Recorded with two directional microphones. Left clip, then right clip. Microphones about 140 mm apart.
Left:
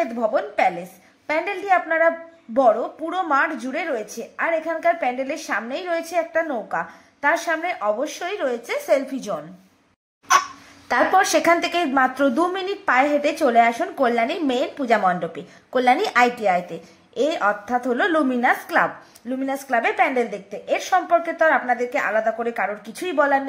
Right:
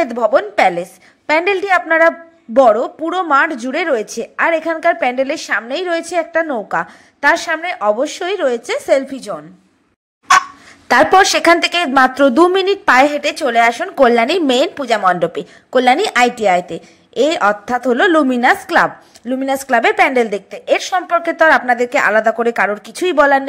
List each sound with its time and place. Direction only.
0.0 s a woman's voice: 50° right (ahead or behind); by 9.3 s 30° right (ahead or behind)
10.9 s a woman's voice: 40° right (ahead or behind)
15.7 s a woman's voice: 30° right (ahead or behind)